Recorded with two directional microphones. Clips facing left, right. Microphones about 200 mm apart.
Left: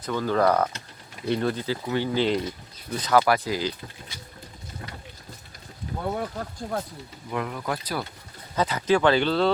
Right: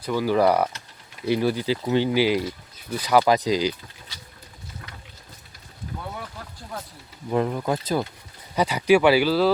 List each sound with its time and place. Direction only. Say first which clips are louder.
0.0 s speech: right 3 dB; 10° right (ahead or behind)
2.2 s speech: right 2 dB; 5° right (ahead or behind)
6.0 s speech: left 10 dB; 50° left (ahead or behind)
7.3 s speech: right 6 dB; 30° right (ahead or behind)
8.5 s speech: right 4 dB; 15° right (ahead or behind)